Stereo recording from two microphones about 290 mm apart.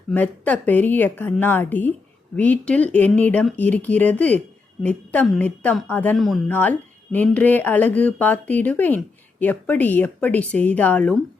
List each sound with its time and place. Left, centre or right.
0.1 s a woman's voice: centre